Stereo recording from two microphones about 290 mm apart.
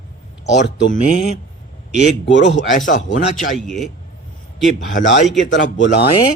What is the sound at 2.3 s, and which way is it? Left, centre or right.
Speech, left.